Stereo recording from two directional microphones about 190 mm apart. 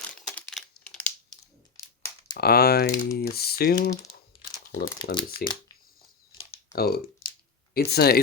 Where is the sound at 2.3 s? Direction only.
55° left (ahead or behind).